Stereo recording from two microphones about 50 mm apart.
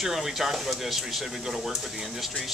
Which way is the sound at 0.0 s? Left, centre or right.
Centre.